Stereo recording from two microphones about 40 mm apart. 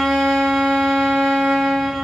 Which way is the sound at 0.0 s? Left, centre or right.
Centre.